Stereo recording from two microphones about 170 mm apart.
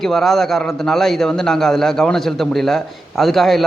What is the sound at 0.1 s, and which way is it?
A man's voice, centre (ahead or behind).